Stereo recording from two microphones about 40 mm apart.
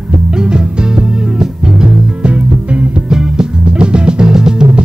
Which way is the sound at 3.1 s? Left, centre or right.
Centre.